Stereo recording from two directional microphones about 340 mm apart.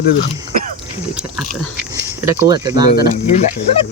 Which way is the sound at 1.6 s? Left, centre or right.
Centre.